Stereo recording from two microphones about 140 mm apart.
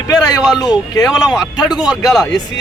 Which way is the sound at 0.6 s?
25° left (ahead or behind).